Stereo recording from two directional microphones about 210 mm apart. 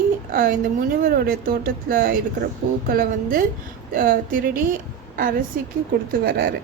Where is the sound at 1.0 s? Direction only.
45° right (ahead or behind).